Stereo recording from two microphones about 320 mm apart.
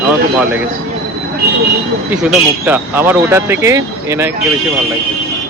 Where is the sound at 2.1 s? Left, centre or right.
Centre.